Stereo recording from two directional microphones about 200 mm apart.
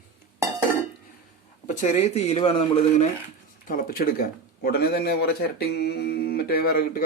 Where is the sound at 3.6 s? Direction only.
45° left (ahead or behind).